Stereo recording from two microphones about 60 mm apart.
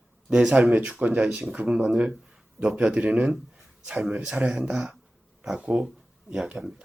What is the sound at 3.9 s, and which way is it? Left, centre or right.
Speech, centre.